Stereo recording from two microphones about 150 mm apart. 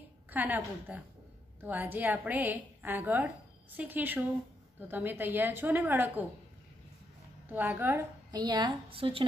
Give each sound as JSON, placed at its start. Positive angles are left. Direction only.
{"t": 0.3, "sound": "a woman's voice", "side_deg": -10}
{"t": 7.4, "sound": "a woman's voice", "side_deg": -10}
{"t": 8.3, "sound": "a woman's voice", "side_deg": -30}